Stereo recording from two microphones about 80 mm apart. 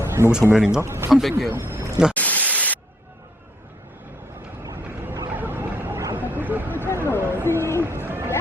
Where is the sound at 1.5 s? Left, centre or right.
Right.